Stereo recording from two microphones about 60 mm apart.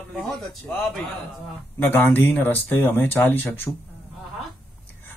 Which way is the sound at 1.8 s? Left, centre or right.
Left.